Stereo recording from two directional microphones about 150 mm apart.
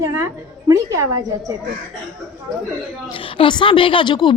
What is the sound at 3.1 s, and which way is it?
A woman's voice, 35° left (ahead or behind).